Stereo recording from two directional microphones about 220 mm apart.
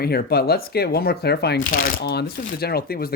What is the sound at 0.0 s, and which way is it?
Speech, 45° left (ahead or behind).